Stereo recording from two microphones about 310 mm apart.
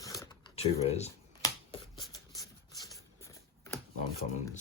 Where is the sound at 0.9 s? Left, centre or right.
Left.